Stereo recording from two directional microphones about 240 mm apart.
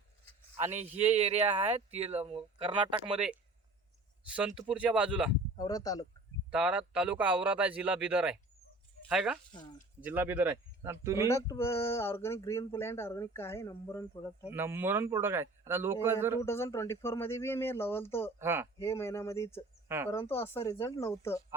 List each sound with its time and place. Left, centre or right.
0.5 s speech: right
4.3 s speech: centre
5.5 s speech: centre
6.5 s a man's voice: centre
11.3 s speech: centre
14.5 s a man's voice: centre
16.4 s speech: centre
18.3 s a man's voice: centre
18.8 s speech: centre